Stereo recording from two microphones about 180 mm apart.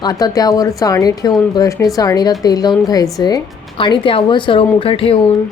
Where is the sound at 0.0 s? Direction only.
20° left (ahead or behind).